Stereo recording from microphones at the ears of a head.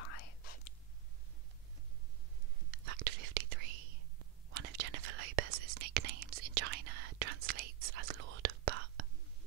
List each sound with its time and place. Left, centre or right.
0.0 s whispering: left
2.7 s whispering: right